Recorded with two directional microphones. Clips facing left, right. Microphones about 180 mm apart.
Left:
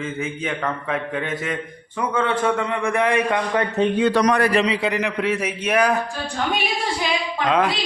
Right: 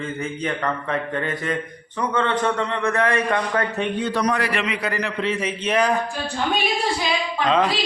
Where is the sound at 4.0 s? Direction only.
85° left.